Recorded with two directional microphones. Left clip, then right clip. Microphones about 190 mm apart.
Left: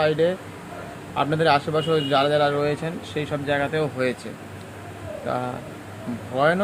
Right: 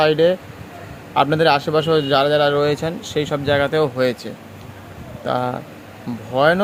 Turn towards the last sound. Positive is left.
turn(degrees=-45)  # may be behind; listen again after turning